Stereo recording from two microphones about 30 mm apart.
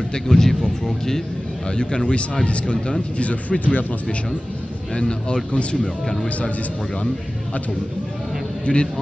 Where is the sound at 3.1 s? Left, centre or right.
Left.